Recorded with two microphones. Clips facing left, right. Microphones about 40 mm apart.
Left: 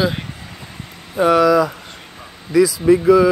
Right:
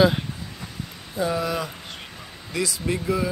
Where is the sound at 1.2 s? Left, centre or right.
Left.